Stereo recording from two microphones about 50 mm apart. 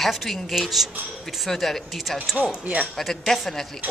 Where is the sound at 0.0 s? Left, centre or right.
Centre.